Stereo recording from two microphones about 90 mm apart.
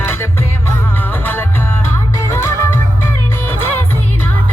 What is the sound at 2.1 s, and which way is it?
Music, 30° left (ahead or behind).